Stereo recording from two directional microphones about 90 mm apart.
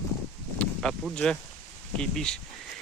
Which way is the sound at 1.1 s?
10° left (ahead or behind).